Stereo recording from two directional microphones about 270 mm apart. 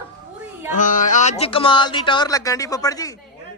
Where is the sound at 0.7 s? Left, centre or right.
Left; by 3.1 s centre.